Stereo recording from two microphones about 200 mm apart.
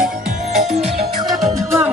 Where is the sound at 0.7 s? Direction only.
30° right (ahead or behind).